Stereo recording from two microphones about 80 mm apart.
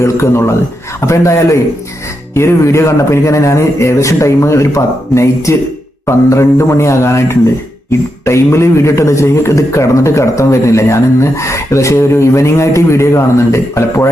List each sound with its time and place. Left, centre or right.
0.0 s a man's voice: left